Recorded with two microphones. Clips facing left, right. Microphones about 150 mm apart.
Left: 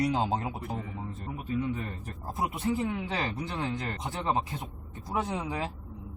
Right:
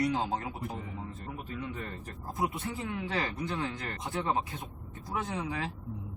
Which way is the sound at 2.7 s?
20° left (ahead or behind).